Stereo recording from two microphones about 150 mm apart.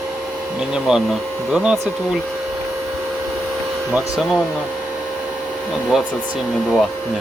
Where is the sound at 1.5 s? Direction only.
5° right (ahead or behind).